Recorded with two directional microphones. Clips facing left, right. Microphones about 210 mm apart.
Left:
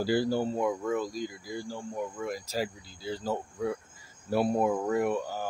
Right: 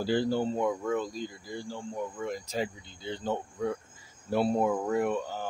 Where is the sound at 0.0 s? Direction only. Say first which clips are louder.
Even; 10° left (ahead or behind).